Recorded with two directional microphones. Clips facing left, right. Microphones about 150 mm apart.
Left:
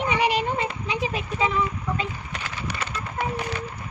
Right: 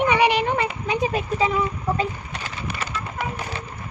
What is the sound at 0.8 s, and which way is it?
Speech, 50° right (ahead or behind).